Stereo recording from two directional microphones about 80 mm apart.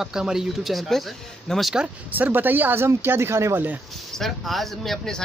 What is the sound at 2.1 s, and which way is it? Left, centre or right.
Speech, right.